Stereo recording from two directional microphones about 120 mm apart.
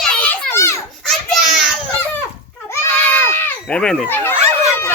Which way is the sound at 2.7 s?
20° left (ahead or behind).